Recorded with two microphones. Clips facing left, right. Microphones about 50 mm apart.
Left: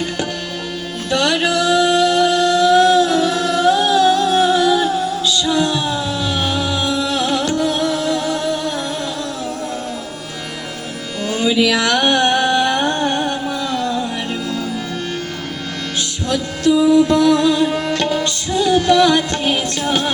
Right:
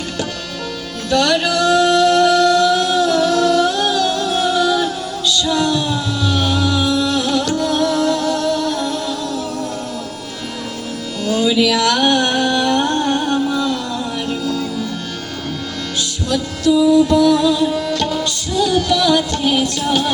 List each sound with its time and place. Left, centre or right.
1.1 s music: left
11.3 s music: left
16.3 s music: left